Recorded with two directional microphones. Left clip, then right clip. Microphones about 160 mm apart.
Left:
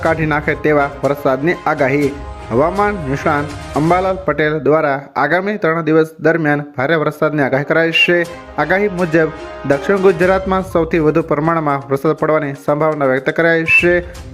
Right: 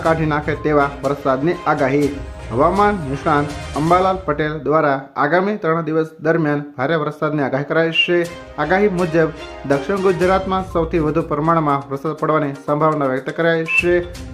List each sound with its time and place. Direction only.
0.0 s speech: 20° left (ahead or behind)